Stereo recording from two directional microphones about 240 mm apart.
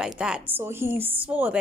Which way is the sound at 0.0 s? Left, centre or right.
Centre.